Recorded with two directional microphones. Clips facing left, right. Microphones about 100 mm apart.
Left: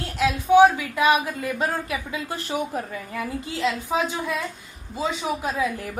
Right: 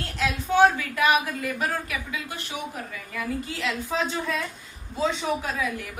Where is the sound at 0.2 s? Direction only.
15° left (ahead or behind).